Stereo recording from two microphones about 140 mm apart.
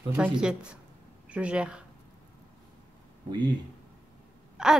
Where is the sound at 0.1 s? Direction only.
10° right (ahead or behind).